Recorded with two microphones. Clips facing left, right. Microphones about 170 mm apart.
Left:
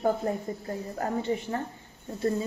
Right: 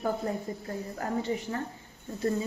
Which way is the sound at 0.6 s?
30° left (ahead or behind).